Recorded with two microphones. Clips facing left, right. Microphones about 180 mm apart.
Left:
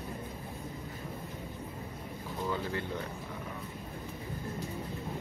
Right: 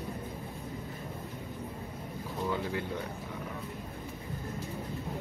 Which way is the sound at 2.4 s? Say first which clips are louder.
Right 2 dB; 5° right (ahead or behind).